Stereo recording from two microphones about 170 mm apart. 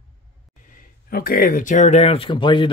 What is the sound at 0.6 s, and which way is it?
A man's voice, 55° left (ahead or behind).